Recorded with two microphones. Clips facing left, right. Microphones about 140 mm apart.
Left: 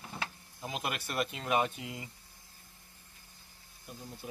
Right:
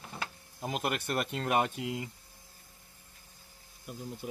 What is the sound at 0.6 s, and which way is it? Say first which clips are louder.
Speech: right 4 dB; 55° right (ahead or behind).